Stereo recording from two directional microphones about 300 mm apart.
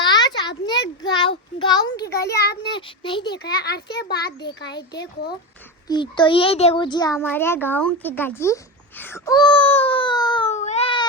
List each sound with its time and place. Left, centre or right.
0.0 s a sound: centre
1.5 s a child's voice: centre
1.9 s a child's voice: left
2.6 s a child's voice: centre
3.3 s a child's voice: left
5.9 s a child's voice: centre